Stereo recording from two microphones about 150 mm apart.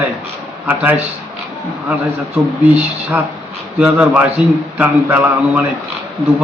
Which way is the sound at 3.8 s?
10° right (ahead or behind).